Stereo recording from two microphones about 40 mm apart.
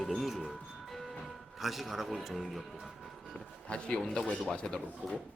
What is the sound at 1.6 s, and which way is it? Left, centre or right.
Speech, centre.